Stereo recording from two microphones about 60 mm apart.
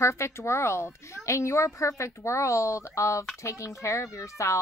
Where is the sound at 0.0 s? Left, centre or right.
Left.